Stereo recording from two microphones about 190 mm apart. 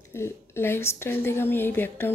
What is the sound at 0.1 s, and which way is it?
A woman's voice, 15° left (ahead or behind).